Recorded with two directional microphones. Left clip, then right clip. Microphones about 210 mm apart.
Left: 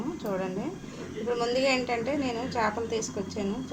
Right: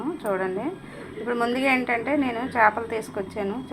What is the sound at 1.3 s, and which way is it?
A woman's voice, 5° right (ahead or behind).